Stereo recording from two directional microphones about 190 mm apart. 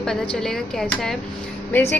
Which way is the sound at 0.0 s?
5° left (ahead or behind).